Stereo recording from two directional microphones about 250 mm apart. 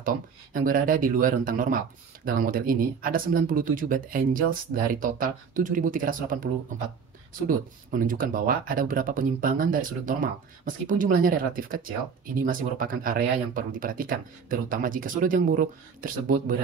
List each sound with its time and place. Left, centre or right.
0.0 s speech: right